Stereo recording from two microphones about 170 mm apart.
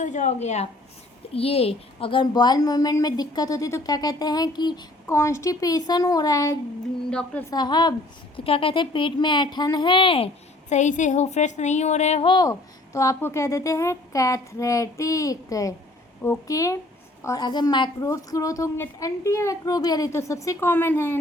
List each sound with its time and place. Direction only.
0.0 s a woman's voice: 45° left (ahead or behind); by 6.6 s 20° left (ahead or behind)
7.1 s speech: 5° left (ahead or behind)
7.5 s a woman's voice: 25° left (ahead or behind)
10.7 s a woman's voice: 45° left (ahead or behind)
12.3 s a woman's voice: 20° left (ahead or behind)